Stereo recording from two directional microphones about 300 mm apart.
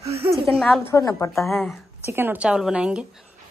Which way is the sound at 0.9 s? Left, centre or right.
Centre.